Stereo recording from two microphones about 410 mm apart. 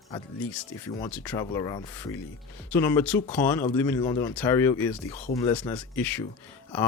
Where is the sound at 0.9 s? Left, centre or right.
Centre.